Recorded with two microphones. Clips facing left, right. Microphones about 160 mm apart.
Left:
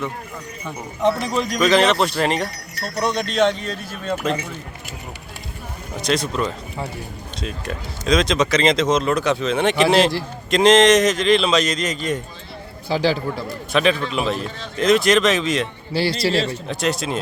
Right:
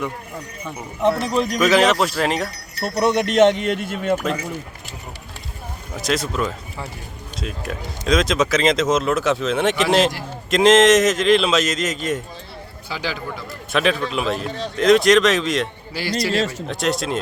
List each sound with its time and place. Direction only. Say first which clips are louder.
0.6 s speech: even; centre (ahead or behind)
2.8 s speech: right 4 dB; 20° right (ahead or behind)
6.0 s speech: left 1 dB; 5° right (ahead or behind)
12.9 s a man's voice: left 8 dB; 35° left (ahead or behind)
13.7 s speech: left 1 dB; centre (ahead or behind)
16.2 s a man's voice: left 1 dB; 35° left (ahead or behind)
16.6 s speech: even; centre (ahead or behind)